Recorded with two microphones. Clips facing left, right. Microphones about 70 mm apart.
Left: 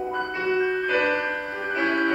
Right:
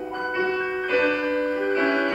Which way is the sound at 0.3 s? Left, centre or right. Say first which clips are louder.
Even; centre.